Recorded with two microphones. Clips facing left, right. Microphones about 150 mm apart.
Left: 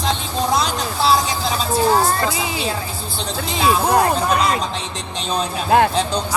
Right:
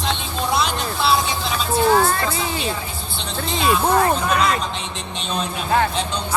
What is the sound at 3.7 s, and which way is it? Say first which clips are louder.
Speech: left 1 dB; 40° left (ahead or behind).